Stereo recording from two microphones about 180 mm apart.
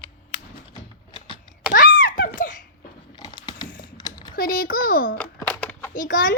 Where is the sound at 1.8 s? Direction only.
50° left (ahead or behind).